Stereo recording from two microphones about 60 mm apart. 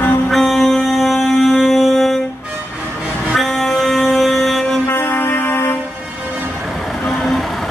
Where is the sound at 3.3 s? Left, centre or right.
Centre.